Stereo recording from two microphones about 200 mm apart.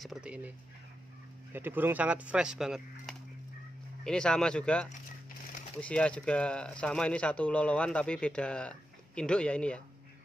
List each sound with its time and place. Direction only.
0.0 s speech: 5° right (ahead or behind)
1.5 s speech: 10° right (ahead or behind); by 9.8 s 5° left (ahead or behind)